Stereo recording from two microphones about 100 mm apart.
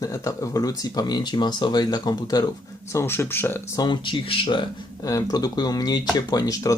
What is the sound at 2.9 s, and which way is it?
Speech, 25° left (ahead or behind).